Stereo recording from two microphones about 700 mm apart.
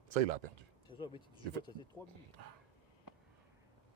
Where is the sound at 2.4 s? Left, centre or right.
Right.